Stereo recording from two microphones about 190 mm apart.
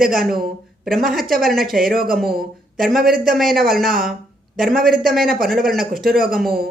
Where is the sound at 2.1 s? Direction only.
Centre (ahead or behind).